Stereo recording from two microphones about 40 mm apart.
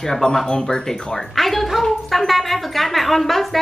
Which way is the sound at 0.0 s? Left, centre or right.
Centre.